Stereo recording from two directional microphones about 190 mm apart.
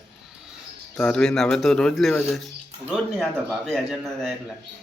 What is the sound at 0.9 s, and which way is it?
Speech, 5° left (ahead or behind).